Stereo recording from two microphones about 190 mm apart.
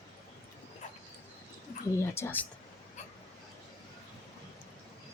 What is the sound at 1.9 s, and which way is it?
Speech, 15° left (ahead or behind).